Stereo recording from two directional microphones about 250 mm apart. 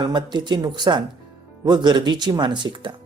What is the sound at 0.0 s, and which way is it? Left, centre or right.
Speech, centre.